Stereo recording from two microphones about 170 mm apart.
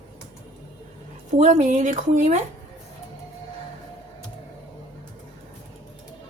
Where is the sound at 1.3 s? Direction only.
45° right (ahead or behind).